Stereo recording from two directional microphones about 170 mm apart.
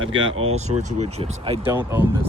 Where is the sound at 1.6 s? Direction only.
10° right (ahead or behind).